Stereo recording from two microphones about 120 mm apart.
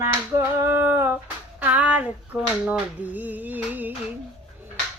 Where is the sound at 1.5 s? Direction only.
10° right (ahead or behind).